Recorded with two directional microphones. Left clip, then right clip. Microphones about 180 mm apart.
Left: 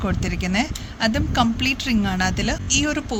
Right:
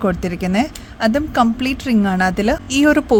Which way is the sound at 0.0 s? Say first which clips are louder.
Right 6 dB; 45° right (ahead or behind).